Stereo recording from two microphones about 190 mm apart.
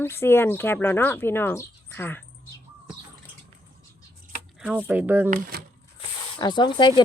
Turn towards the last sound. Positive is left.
turn(degrees=25)  # may be behind; listen again after turning